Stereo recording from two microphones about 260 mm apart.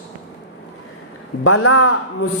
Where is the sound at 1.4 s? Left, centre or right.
Left.